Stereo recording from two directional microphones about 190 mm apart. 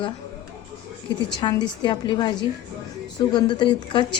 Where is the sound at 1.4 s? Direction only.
25° left (ahead or behind).